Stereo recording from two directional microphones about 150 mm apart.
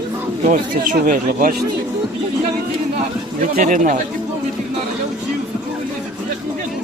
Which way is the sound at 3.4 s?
60° right (ahead or behind).